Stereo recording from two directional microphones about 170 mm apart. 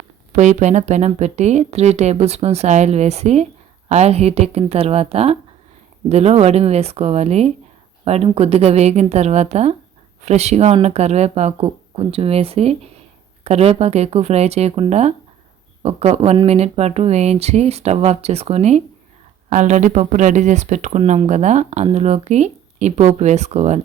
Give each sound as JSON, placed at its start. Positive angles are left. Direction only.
{"t": 0.3, "sound": "speech", "side_deg": -45}